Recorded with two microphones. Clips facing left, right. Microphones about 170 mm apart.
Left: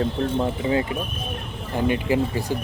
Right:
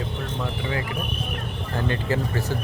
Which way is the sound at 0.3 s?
25° left (ahead or behind).